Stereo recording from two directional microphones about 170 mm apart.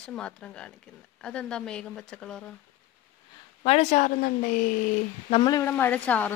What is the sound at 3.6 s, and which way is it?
Speech, 40° left (ahead or behind).